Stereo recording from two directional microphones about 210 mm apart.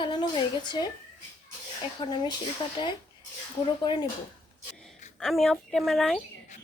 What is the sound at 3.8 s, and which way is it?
Speech, 20° left (ahead or behind).